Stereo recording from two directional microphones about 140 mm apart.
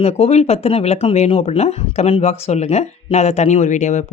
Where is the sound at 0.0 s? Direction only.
50° left (ahead or behind).